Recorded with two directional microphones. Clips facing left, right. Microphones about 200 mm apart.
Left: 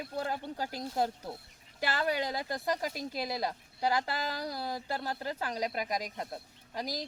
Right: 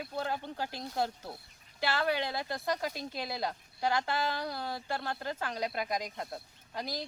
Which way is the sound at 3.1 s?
10° left (ahead or behind).